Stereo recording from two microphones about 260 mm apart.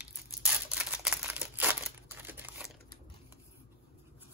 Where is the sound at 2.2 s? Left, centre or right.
Centre.